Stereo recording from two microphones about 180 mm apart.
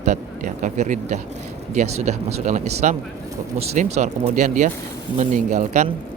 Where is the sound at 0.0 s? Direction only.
45° right (ahead or behind).